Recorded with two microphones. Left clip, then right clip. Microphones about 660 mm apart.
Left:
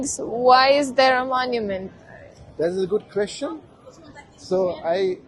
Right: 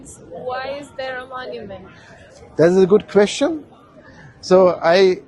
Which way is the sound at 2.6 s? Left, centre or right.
Right.